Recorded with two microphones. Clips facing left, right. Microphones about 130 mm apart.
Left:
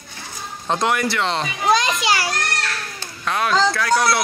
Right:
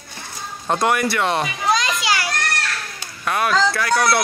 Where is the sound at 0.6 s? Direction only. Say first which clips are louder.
Right 1 dB; 5° right (ahead or behind).